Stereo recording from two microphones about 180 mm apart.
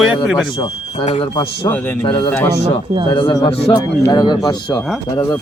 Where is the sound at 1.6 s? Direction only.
10° left (ahead or behind).